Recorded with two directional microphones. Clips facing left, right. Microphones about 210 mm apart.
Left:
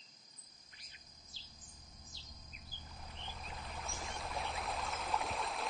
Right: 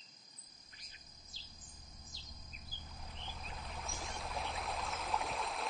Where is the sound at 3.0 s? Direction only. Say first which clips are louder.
Even; centre (ahead or behind).